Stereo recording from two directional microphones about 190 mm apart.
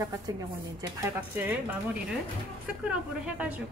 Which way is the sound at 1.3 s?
10° right (ahead or behind).